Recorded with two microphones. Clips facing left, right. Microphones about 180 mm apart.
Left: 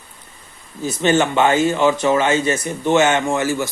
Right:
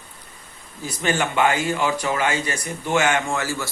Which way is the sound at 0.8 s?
25° left (ahead or behind).